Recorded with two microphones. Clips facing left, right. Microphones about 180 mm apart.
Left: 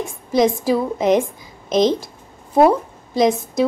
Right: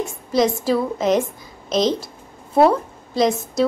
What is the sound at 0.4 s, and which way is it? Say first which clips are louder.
Speech: left 2 dB; 15° left (ahead or behind).